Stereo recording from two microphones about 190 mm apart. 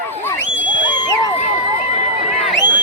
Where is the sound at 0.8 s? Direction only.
25° left (ahead or behind).